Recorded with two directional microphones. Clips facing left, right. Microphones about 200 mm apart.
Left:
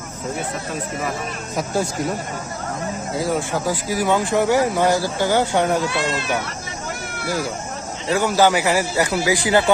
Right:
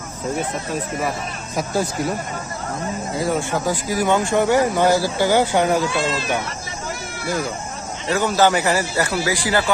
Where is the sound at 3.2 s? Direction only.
Centre (ahead or behind).